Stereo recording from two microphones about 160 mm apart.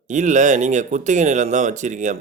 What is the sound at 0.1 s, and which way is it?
Speech, 50° right (ahead or behind).